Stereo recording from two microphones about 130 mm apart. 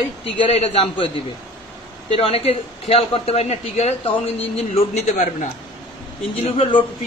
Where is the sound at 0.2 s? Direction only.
50° left (ahead or behind).